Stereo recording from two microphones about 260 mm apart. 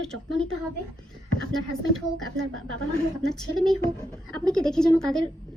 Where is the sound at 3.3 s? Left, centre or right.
Centre.